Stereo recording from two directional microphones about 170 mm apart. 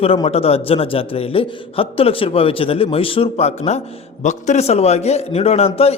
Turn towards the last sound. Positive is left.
turn(degrees=35)  # may be behind; listen again after turning